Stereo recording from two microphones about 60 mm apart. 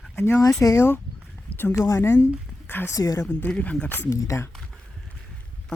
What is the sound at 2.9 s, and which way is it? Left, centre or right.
Speech, left.